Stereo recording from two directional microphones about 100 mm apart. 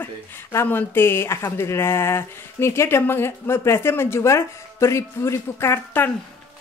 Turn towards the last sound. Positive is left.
turn(degrees=20)  # may be behind; listen again after turning